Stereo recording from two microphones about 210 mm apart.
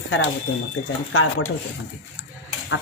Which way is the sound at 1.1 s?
80° left.